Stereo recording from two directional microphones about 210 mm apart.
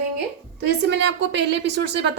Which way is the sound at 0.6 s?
55° right (ahead or behind).